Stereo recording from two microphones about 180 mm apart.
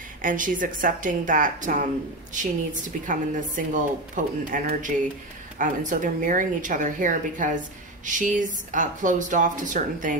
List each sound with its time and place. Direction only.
0.2 s speech: 50° right (ahead or behind)